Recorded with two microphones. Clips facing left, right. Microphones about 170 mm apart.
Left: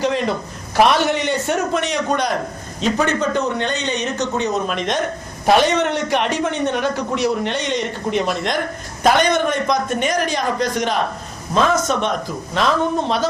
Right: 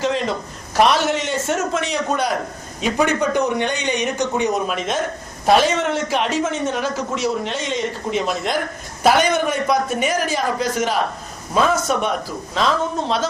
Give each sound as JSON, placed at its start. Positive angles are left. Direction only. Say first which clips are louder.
{"t": 0.0, "sound": "a man's voice", "louder": "left 1 dB", "side_deg": 0}